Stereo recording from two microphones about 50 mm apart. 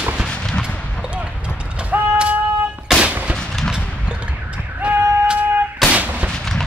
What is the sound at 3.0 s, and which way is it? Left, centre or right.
Gunshot, right.